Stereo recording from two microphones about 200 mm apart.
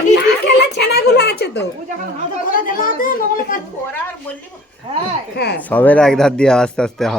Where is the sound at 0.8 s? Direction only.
55° left (ahead or behind).